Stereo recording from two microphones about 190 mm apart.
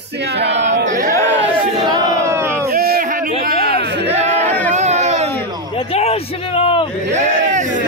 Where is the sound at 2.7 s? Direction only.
50° right (ahead or behind); by 5.3 s 35° right (ahead or behind).